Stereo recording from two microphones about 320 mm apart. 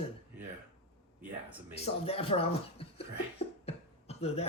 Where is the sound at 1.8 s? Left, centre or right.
Centre.